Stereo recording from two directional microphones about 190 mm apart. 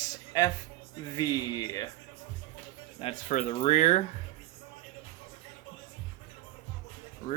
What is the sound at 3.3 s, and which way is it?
Speech, 40° left (ahead or behind).